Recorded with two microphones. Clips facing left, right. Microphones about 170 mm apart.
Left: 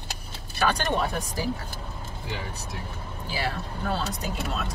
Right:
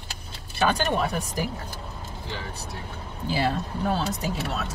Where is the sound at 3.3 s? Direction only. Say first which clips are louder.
Right 5 dB; 15° right (ahead or behind).